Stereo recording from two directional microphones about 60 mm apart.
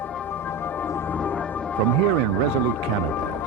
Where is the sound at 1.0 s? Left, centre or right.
Left.